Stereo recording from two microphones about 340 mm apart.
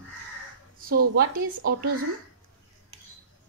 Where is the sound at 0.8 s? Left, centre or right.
Right.